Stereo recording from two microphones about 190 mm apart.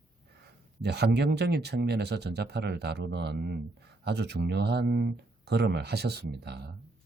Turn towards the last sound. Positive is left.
turn(degrees=-60)  # may be behind; listen again after turning